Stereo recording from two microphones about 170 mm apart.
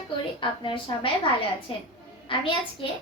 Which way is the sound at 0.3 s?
30° left (ahead or behind).